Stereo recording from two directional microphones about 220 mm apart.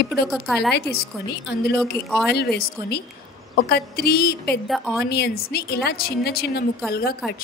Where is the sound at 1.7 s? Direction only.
Centre (ahead or behind).